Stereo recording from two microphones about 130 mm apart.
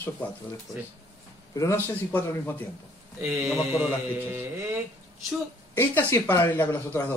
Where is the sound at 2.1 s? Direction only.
15° left (ahead or behind).